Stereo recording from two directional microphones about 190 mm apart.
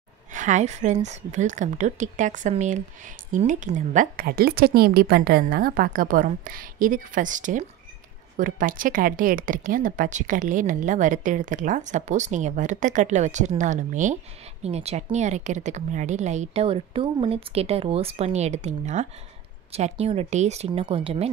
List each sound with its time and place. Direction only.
0.3 s a woman's voice: 40° right (ahead or behind)